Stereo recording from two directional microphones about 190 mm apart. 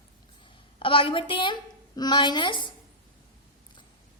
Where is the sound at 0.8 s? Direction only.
25° left (ahead or behind).